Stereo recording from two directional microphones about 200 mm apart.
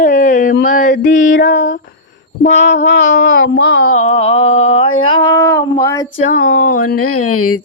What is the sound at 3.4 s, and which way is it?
Speech, 85° left.